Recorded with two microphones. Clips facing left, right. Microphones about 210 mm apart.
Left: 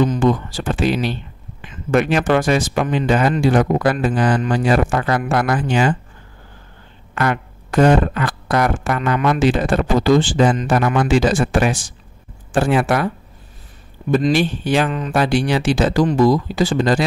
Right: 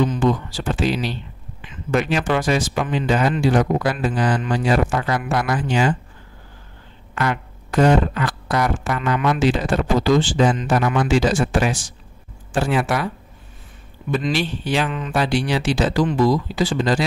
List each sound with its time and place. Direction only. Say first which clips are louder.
0.0 s speech: left 3 dB; 50° left (ahead or behind)
7.2 s speech: left 3 dB; 55° left (ahead or behind)
14.1 s speech: left 6 dB; 50° left (ahead or behind)